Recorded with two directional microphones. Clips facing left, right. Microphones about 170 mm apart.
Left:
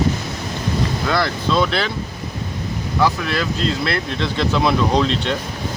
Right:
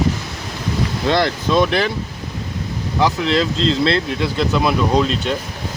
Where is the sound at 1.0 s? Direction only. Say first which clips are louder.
Right 5 dB; 20° right (ahead or behind).